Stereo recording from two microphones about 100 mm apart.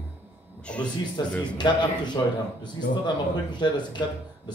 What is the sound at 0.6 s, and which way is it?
Speech, 10° left (ahead or behind).